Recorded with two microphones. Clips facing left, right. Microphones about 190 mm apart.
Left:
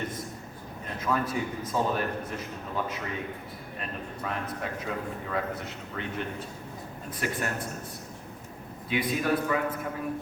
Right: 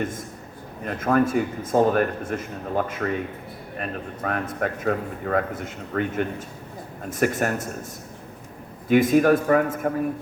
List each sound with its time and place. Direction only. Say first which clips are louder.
0.9 s a man's voice: right 9 dB; 55° right (ahead or behind)
8.9 s a man's voice: right 11 dB; 45° right (ahead or behind)